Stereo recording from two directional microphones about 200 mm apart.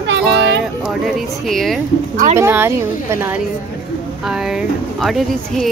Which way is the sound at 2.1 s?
40° right (ahead or behind).